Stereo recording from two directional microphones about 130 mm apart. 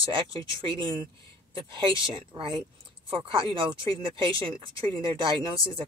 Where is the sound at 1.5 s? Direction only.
40° right (ahead or behind).